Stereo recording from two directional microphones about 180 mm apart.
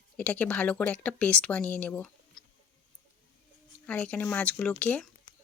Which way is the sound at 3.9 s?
5° left (ahead or behind).